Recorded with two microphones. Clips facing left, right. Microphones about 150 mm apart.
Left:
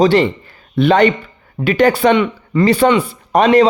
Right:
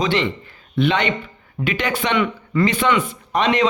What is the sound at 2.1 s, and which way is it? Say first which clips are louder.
Speech: left 4 dB; 25° left (ahead or behind).